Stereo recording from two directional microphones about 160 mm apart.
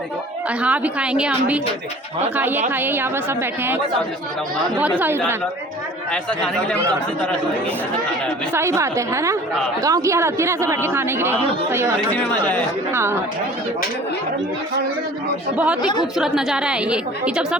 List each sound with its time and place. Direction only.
0.6 s speech: 10° right (ahead or behind)
4.9 s speech: 10° right (ahead or behind)
6.1 s speech: 5° left (ahead or behind)
8.5 s a woman's voice: 20° right (ahead or behind)
11.9 s speech: 10° left (ahead or behind)
12.9 s speech: 15° right (ahead or behind)
15.5 s a woman's voice: 5° right (ahead or behind)